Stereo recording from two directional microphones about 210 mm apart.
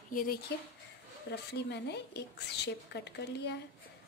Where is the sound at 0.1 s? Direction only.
40° left (ahead or behind).